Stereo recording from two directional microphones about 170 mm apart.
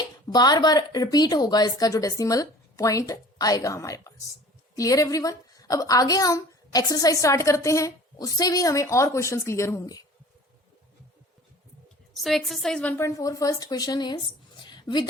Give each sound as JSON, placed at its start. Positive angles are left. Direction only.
{"t": 0.3, "sound": "a woman's voice", "side_deg": 25}
{"t": 12.1, "sound": "a woman's voice", "side_deg": 0}
{"t": 13.0, "sound": "speech", "side_deg": 20}